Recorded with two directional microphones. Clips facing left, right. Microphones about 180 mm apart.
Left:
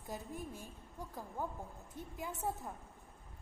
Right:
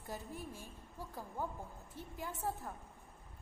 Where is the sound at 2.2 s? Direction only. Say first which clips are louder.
Left 1 dB; centre (ahead or behind).